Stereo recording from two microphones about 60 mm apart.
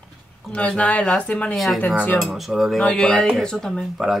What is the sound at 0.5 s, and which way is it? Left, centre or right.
Speech, left.